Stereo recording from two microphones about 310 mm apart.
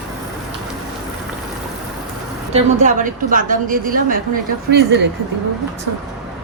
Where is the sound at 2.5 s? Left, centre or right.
Right.